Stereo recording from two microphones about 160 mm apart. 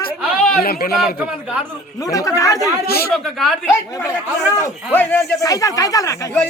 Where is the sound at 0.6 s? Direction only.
70° left (ahead or behind).